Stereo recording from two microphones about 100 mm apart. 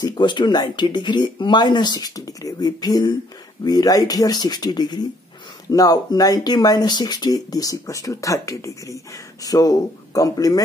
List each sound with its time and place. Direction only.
0.0 s speech: 45° left (ahead or behind)